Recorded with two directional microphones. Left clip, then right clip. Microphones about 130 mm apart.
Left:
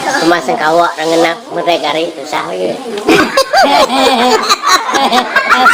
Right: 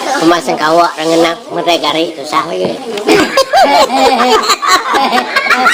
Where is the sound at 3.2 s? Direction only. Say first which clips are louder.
Right 1 dB; 25° right (ahead or behind).